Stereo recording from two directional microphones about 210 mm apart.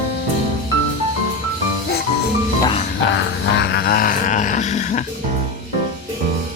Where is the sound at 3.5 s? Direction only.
55° left (ahead or behind); by 5.0 s 35° left (ahead or behind).